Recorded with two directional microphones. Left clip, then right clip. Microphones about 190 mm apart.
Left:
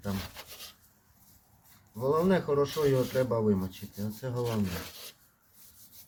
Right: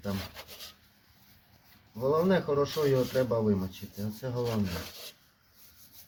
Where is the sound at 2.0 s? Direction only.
25° left (ahead or behind).